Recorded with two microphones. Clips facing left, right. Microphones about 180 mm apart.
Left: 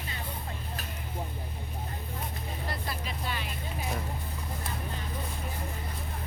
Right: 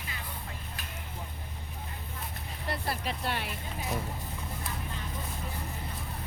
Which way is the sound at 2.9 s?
65° right (ahead or behind).